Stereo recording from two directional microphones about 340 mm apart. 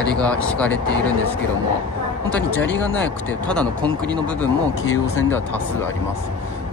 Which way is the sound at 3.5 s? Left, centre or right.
Centre.